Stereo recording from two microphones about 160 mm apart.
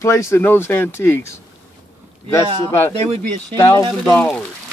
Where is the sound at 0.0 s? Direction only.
15° left (ahead or behind).